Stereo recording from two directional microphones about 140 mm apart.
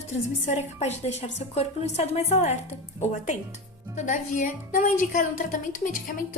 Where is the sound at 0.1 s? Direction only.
60° left (ahead or behind).